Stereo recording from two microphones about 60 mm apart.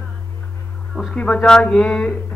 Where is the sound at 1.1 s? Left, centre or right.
Centre.